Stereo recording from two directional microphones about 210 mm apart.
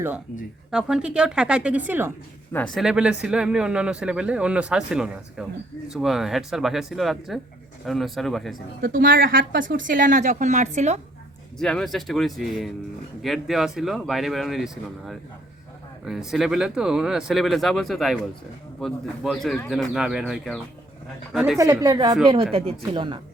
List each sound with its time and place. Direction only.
0.7 s a man's voice: 5° right (ahead or behind)
2.5 s a man's voice: 5° left (ahead or behind)
8.8 s a woman's voice: 45° right (ahead or behind)
11.5 s a man's voice: 5° left (ahead or behind)
21.6 s a woman's voice: 15° right (ahead or behind)